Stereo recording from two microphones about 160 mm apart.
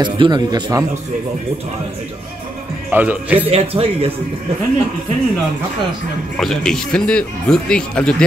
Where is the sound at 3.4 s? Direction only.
40° right (ahead or behind).